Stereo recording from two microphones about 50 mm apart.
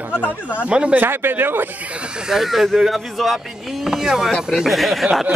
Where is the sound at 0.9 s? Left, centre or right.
Right.